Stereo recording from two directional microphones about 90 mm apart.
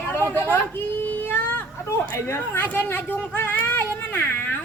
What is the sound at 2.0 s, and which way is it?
A man's voice, 30° left (ahead or behind).